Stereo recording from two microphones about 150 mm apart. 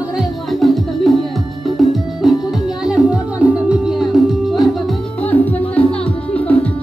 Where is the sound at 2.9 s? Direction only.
5° right (ahead or behind).